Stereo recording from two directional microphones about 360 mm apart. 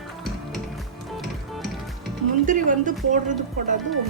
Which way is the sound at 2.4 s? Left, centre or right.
Right.